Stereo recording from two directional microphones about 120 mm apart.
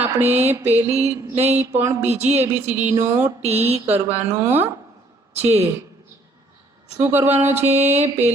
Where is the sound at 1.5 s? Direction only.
15° right (ahead or behind).